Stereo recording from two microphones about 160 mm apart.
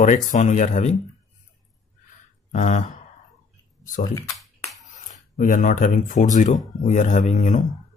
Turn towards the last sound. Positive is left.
turn(degrees=50)  # may be behind; listen again after turning